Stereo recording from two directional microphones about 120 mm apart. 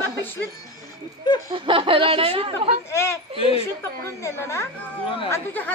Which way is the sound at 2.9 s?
20° left (ahead or behind).